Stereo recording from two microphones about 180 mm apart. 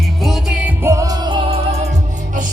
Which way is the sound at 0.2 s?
Centre (ahead or behind).